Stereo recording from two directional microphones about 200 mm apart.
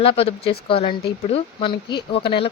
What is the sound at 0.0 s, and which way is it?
Speech, 30° left (ahead or behind).